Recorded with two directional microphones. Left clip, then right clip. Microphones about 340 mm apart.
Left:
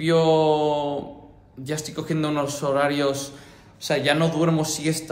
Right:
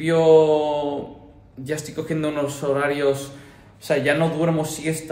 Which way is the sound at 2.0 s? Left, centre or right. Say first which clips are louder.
Right 1 dB; centre.